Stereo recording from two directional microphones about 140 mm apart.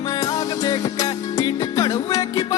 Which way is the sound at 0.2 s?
25° left (ahead or behind).